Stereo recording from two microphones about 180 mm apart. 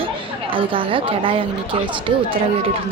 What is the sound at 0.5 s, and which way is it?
Speech, 30° right (ahead or behind).